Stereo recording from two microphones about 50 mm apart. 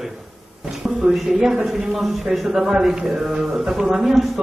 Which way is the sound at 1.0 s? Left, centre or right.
Centre.